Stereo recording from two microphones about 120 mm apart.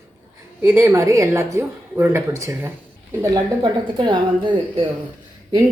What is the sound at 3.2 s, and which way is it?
A woman's voice, 35° right (ahead or behind).